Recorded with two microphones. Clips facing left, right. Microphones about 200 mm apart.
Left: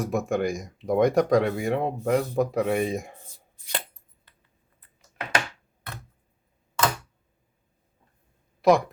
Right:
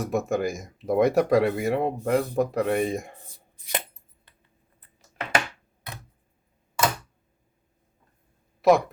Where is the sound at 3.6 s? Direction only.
20° right (ahead or behind).